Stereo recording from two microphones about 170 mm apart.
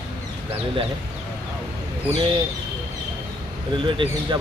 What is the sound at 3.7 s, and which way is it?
Speech, 30° right (ahead or behind).